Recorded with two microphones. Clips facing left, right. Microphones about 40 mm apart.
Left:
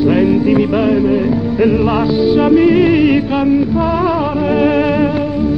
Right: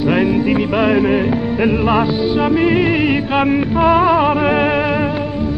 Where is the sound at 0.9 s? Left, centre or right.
Right.